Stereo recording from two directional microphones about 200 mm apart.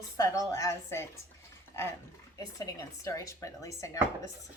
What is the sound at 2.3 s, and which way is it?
A woman's voice, 20° left (ahead or behind).